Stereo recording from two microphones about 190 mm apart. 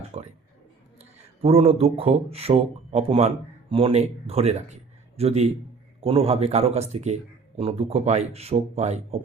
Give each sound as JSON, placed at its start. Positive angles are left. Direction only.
{"t": 0.1, "sound": "speech", "side_deg": -35}
{"t": 1.4, "sound": "speech", "side_deg": -35}